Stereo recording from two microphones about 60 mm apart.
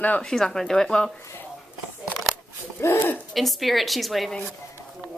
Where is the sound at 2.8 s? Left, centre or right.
Left.